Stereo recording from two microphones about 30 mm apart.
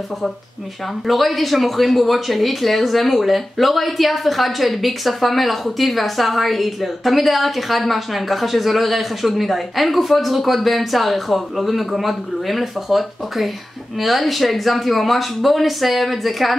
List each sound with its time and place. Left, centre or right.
1.0 s speech: centre